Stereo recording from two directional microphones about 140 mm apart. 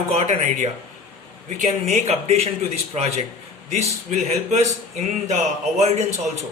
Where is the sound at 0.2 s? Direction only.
50° right (ahead or behind).